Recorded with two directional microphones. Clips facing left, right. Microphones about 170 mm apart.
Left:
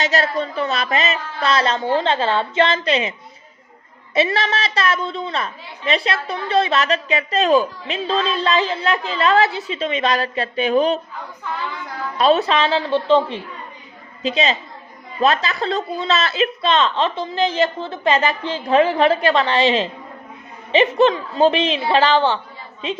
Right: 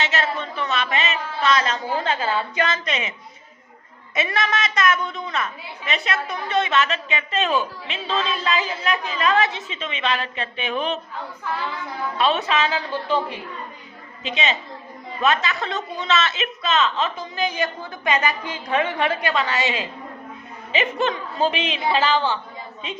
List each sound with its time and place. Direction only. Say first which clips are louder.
0.0 s a woman's voice: left 5 dB; 40° left (ahead or behind)
11.5 s child singing: even; 5° right (ahead or behind)
12.1 s a woman's voice: left 6 dB; 40° left (ahead or behind)
14.2 s a woman's voice: left 5 dB; 35° left (ahead or behind)
17.4 s a woman's voice: left 6 dB; 15° right (ahead or behind)
18.0 s a woman's voice: left 4 dB; 30° left (ahead or behind)
21.5 s a woman's voice: left 5 dB; 10° right (ahead or behind)